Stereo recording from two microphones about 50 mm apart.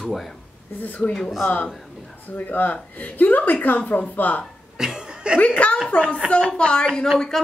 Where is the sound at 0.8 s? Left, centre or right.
Left.